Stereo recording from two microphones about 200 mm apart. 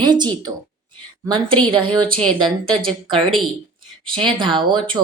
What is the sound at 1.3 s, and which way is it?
Speech, 25° right (ahead or behind).